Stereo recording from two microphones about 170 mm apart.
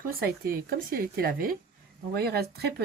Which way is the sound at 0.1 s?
60° right (ahead or behind).